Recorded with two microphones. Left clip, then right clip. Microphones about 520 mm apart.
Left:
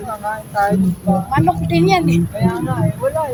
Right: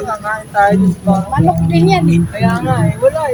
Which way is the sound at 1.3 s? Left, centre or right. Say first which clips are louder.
Even; left.